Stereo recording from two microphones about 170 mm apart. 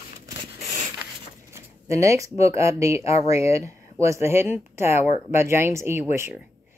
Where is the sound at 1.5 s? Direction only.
15° right (ahead or behind).